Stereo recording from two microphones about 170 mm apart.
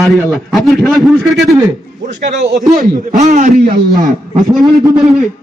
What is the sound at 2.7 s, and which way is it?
Speech, 55° right (ahead or behind).